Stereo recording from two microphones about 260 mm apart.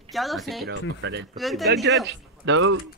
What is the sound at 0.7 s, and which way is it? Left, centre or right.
Speech, right.